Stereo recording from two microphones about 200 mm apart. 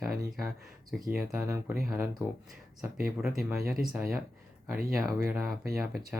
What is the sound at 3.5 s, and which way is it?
Speech, 15° right (ahead or behind).